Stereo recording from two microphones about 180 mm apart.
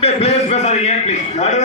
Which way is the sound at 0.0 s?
35° left (ahead or behind).